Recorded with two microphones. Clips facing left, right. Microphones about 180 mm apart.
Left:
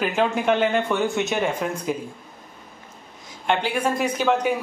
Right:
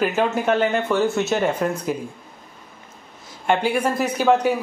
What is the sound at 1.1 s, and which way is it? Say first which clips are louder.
Speech: right 2 dB; 15° left (ahead or behind).